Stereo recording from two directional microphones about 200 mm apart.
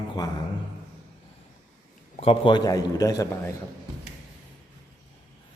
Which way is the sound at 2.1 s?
25° left (ahead or behind).